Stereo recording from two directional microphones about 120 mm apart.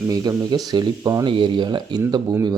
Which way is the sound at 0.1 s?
30° right (ahead or behind).